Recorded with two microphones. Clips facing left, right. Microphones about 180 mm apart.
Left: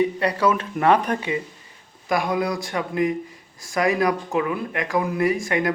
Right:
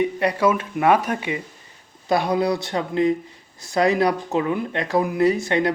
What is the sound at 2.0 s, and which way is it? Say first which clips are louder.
A man's voice: right 3 dB; 30° right (ahead or behind).